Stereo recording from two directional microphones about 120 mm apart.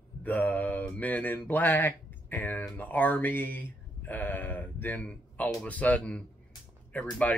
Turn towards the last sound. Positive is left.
turn(degrees=15)  # may be behind; listen again after turning